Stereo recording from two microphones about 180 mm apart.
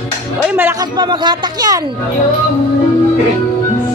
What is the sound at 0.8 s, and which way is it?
Speech, 25° right (ahead or behind).